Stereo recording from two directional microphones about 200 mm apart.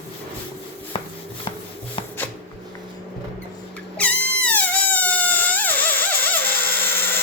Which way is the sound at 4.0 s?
5° left (ahead or behind).